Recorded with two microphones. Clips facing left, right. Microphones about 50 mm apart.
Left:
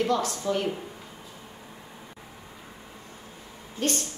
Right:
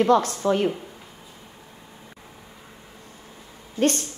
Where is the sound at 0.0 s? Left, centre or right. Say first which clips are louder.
Right 7 dB; right.